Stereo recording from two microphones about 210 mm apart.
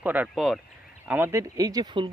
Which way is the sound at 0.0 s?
5° right (ahead or behind).